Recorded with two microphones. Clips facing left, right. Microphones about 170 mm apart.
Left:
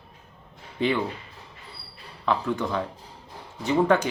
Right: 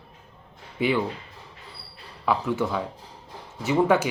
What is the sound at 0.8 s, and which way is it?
Speech, 10° right (ahead or behind).